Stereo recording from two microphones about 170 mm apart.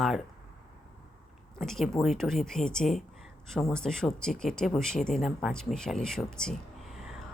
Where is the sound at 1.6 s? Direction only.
Centre (ahead or behind).